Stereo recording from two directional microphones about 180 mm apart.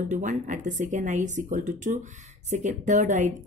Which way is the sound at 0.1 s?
45° right (ahead or behind).